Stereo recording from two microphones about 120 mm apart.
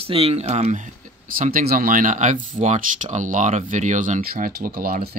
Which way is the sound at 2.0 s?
90° right.